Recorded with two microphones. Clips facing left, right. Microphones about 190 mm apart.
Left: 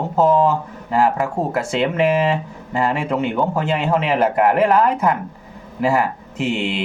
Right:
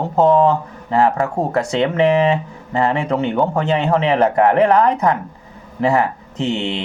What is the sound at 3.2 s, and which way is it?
Speech, 10° left (ahead or behind).